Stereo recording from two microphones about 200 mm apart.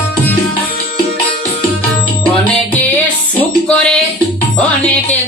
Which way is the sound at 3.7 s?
5° left (ahead or behind).